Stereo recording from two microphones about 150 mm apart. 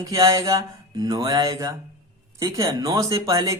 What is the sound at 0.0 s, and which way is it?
Speech, 20° right (ahead or behind).